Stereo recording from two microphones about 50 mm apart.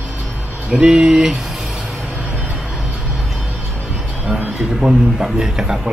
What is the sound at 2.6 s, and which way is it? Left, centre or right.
Music, centre.